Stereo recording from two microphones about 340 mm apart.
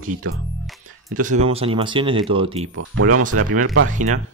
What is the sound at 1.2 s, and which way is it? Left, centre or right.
Speech, centre.